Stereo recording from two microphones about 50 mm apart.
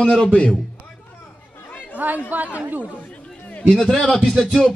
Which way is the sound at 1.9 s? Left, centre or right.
Right.